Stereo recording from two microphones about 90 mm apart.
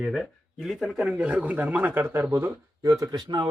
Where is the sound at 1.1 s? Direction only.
15° right (ahead or behind).